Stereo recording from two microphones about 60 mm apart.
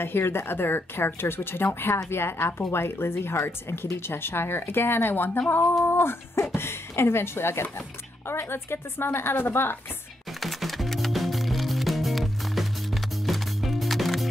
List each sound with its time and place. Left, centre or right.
0.0 s a woman's voice: left
10.4 s music: centre